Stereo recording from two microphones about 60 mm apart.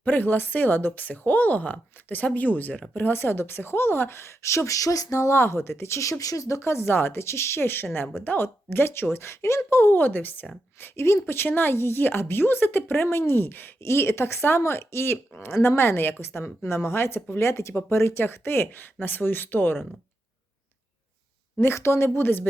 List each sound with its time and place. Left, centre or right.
0.0 s a woman's voice: left
9.7 s a woman's voice: left
13.8 s a woman's voice: left
17.5 s a woman's voice: left
21.6 s a woman's voice: left